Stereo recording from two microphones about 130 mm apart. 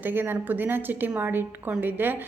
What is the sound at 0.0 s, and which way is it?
A woman's voice, 15° right (ahead or behind).